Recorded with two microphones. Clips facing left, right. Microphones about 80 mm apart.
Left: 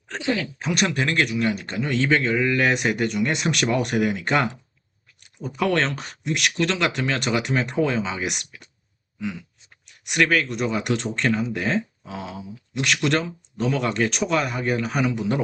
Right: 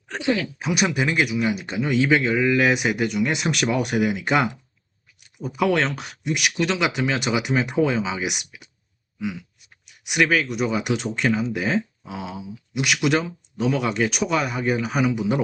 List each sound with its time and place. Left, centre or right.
0.3 s speech: centre
9.1 s a sound: centre
9.8 s speech: centre